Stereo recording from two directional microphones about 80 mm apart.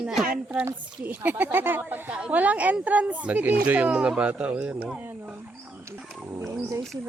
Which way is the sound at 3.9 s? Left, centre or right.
Centre.